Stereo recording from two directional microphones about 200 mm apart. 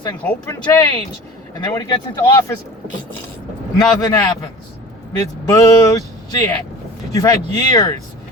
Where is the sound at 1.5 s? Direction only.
15° left (ahead or behind).